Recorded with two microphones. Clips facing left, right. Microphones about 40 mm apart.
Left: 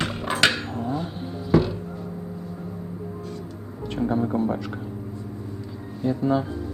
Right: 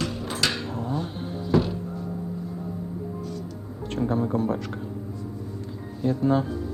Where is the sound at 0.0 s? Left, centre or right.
Left.